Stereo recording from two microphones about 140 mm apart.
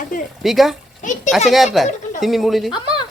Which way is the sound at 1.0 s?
65° left (ahead or behind).